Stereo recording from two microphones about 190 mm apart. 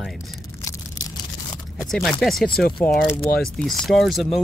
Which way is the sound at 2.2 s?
Centre (ahead or behind).